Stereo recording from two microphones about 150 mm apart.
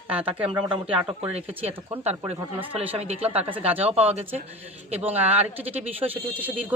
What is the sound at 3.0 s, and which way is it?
Speech, 45° right (ahead or behind).